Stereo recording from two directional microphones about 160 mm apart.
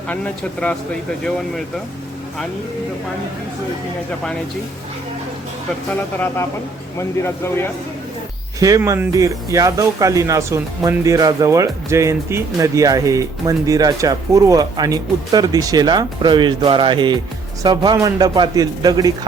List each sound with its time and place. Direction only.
6.1 s speech: 15° left (ahead or behind)
8.5 s speech: 20° right (ahead or behind)